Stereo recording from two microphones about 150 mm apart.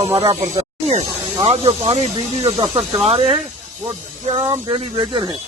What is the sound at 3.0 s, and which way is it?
Speech, 40° right (ahead or behind).